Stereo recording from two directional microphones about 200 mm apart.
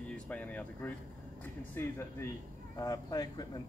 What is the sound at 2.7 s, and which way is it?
Speech, 20° left (ahead or behind).